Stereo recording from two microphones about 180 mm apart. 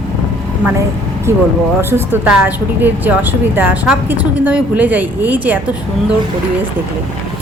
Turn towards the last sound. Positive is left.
turn(degrees=-10)  # may be behind; listen again after turning